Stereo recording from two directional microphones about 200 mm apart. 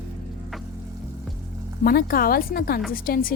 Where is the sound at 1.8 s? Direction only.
50° left (ahead or behind).